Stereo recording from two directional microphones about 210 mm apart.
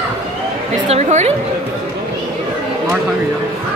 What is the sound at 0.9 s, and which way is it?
Chatter, 35° right (ahead or behind).